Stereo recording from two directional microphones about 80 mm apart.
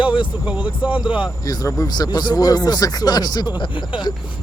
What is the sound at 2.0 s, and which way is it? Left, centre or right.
Speech, left.